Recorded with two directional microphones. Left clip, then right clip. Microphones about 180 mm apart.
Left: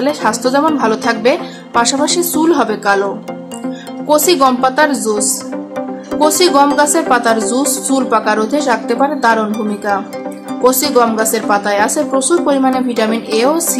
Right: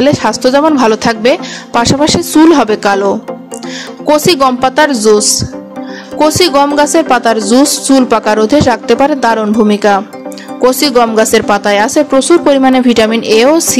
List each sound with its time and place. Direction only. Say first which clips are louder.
0.0 s a woman's voice: right 5 dB; 45° right (ahead or behind)
4.1 s a woman's voice: right 2 dB; 45° right (ahead or behind)
6.2 s a woman's voice: right 2 dB; 45° right (ahead or behind)